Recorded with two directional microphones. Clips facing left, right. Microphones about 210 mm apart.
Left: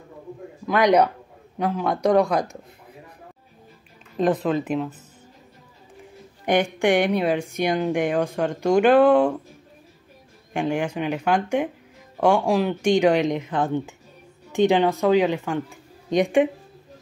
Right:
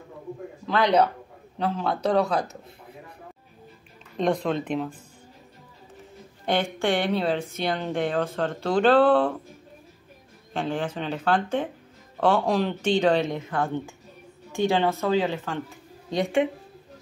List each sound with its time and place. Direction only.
0.7 s speech: 15° left (ahead or behind)
4.2 s speech: 5° left (ahead or behind)
6.4 s speech: 15° left (ahead or behind)
10.5 s speech: 15° left (ahead or behind)